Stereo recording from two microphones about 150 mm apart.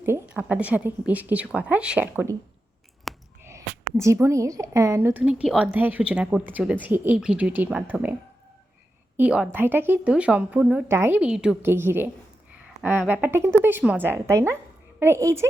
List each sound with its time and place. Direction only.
0.0 s a woman's voice: 15° right (ahead or behind)
3.1 s a sound: centre (ahead or behind)
3.9 s a woman's voice: 20° right (ahead or behind)
9.1 s a woman's voice: 10° right (ahead or behind)